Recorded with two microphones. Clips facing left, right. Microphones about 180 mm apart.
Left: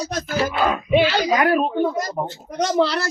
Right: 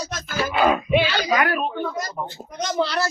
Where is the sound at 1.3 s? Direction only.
30° left (ahead or behind).